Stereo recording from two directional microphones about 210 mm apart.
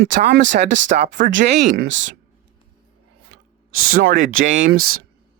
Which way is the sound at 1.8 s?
60° right (ahead or behind).